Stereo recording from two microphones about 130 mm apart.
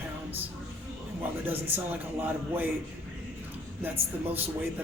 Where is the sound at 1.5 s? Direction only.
15° right (ahead or behind).